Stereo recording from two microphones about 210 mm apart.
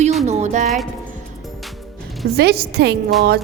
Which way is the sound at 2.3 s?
50° right (ahead or behind).